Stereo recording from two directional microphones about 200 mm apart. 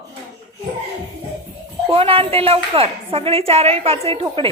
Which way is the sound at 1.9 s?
30° right (ahead or behind).